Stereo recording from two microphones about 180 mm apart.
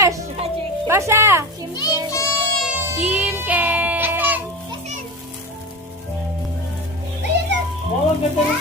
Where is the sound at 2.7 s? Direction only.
5° right (ahead or behind).